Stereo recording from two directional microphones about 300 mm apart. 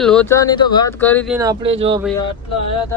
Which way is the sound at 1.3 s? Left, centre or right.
Centre.